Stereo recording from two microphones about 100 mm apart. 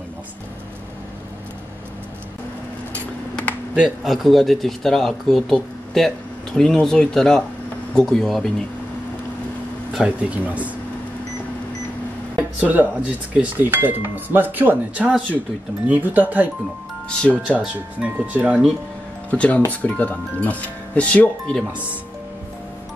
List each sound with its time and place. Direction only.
2.9 s a sound: 15° left (ahead or behind)
3.7 s speech: 5° right (ahead or behind)
9.9 s speech: 15° right (ahead or behind)
12.4 s speech: 15° right (ahead or behind)
17.1 s speech: 10° left (ahead or behind)
17.7 s speech: 15° right (ahead or behind)
19.3 s speech: 10° left (ahead or behind)